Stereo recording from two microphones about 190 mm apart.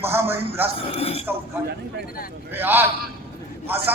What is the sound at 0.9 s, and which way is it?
Speech, 30° left (ahead or behind).